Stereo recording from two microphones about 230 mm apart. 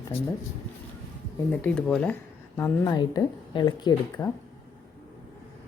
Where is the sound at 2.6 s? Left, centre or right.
Centre.